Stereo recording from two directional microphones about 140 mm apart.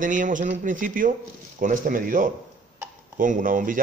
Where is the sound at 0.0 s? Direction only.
70° right (ahead or behind).